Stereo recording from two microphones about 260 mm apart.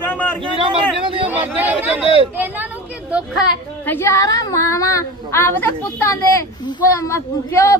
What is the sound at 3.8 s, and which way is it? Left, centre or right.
A woman's voice, centre.